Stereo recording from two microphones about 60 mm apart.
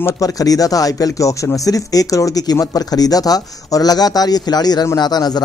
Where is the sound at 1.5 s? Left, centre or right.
Left.